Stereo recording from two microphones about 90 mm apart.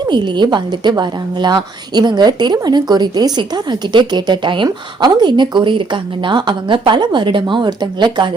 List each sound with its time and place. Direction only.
0.0 s a woman's voice: 55° right (ahead or behind)